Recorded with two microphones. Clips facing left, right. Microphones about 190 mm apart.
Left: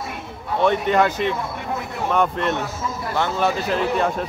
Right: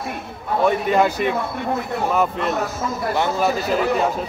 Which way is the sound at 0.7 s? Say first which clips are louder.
Even; 10° right (ahead or behind).